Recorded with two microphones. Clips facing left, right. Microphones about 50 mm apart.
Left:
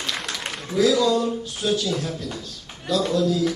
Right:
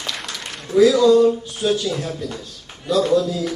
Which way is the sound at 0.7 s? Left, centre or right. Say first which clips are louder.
Right 7 dB; right.